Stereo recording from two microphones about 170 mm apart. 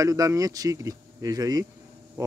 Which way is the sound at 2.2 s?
15° right (ahead or behind).